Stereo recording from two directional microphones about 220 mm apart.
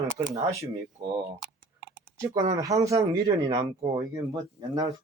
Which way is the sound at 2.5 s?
15° right (ahead or behind).